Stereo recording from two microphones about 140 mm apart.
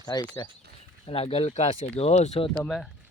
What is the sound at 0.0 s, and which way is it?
Speech, 30° left (ahead or behind).